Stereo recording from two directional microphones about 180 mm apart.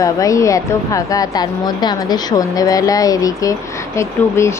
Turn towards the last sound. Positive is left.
turn(degrees=15)  # may be behind; listen again after turning